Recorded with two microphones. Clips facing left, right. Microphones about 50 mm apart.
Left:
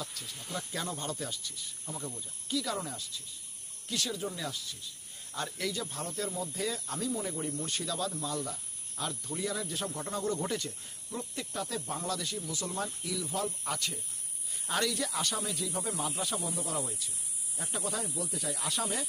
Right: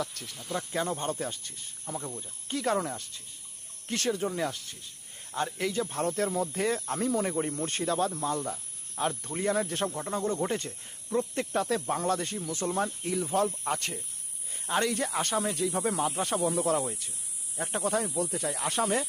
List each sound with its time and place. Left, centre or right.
0.0 s speech: right
0.5 s speech: right
2.0 s speech: right
2.2 s speech: right
5.3 s speech: right
7.1 s speech: right
7.3 s speech: right
10.1 s speech: right
11.3 s speech: right